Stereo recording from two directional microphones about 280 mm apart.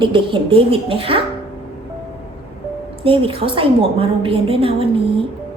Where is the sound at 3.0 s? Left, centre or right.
Centre.